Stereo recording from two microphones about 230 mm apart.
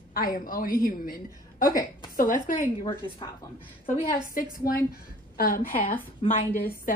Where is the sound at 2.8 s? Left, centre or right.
Left.